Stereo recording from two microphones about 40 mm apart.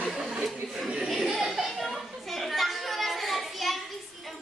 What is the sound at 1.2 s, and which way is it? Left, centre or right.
Chatter, centre.